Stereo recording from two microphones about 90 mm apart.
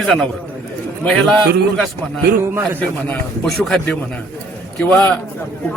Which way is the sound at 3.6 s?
5° left (ahead or behind).